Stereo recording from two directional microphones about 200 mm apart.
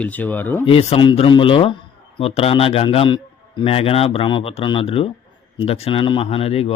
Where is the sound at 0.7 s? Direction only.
25° left (ahead or behind).